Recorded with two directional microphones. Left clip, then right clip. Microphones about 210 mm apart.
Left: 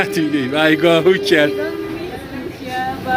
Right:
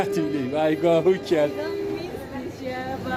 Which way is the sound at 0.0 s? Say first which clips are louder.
Left 7 dB; 10° right (ahead or behind).